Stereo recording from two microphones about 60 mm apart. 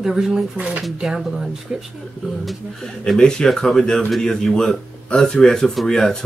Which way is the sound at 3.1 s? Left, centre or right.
Centre.